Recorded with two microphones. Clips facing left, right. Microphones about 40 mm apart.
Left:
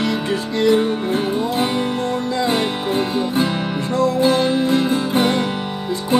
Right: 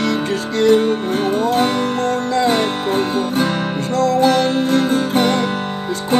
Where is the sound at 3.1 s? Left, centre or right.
Right.